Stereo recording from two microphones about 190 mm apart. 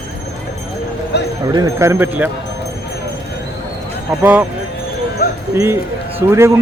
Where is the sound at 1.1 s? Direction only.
60° left (ahead or behind).